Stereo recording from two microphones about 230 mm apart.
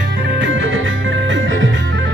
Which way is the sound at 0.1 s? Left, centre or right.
Right.